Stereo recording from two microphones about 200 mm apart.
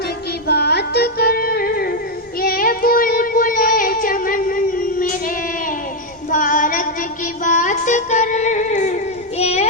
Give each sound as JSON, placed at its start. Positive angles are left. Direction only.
{"t": 0.4, "sound": "music", "side_deg": 55}
{"t": 2.4, "sound": "child singing", "side_deg": 45}
{"t": 6.3, "sound": "female singing", "side_deg": 40}
{"t": 7.4, "sound": "child singing", "side_deg": 40}